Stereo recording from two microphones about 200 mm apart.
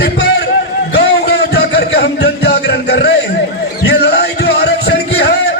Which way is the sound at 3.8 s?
55° left (ahead or behind).